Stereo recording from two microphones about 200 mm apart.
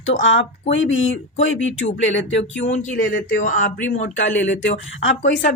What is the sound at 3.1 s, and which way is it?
Speech, 40° left (ahead or behind).